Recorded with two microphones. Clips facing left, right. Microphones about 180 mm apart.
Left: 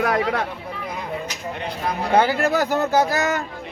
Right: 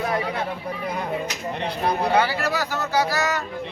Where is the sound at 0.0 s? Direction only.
70° left (ahead or behind).